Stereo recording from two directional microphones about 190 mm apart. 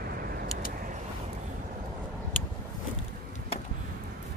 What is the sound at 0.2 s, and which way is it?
Vehicle, 50° right (ahead or behind).